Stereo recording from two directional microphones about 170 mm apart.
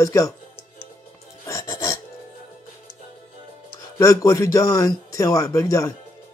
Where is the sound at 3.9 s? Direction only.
20° left (ahead or behind).